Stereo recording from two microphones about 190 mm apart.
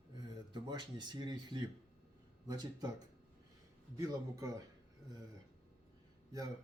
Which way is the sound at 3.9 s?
20° right (ahead or behind).